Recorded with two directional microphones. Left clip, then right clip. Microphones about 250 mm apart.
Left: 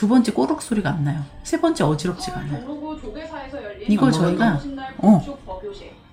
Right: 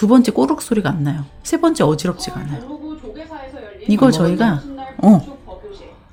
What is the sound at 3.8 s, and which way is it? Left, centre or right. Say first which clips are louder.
Speech: right 5 dB; right.